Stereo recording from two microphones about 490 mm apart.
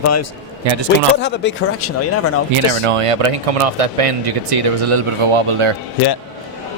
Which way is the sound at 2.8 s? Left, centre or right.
Right.